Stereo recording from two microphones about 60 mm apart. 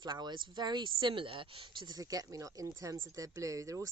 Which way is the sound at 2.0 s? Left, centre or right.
Right.